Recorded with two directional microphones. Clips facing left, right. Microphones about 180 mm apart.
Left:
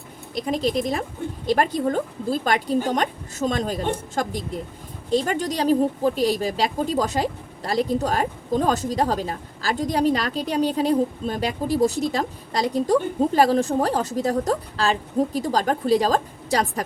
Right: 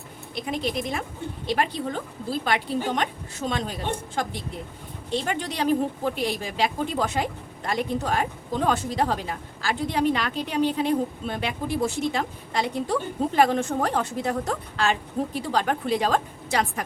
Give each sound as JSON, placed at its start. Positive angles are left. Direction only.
{"t": 0.3, "sound": "a woman's voice", "side_deg": 40}